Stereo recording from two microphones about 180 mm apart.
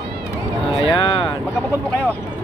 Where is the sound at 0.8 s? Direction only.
30° left (ahead or behind).